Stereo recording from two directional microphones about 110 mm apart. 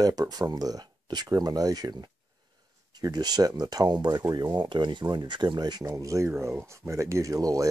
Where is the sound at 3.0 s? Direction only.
35° right (ahead or behind).